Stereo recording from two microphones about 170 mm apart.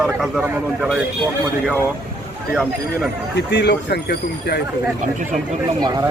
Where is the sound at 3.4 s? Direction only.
85° left.